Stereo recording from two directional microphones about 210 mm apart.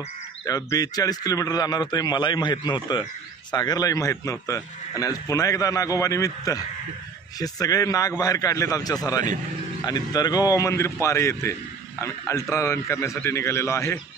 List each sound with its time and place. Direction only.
0.5 s a man's voice: 15° left (ahead or behind)